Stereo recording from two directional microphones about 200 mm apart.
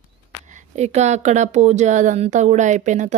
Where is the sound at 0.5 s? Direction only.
35° right (ahead or behind).